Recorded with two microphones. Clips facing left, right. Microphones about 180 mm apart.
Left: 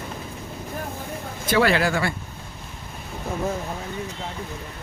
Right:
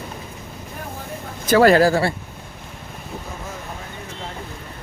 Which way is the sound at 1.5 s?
45° right (ahead or behind).